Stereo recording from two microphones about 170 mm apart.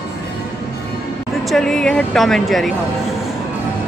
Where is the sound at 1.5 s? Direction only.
5° left (ahead or behind).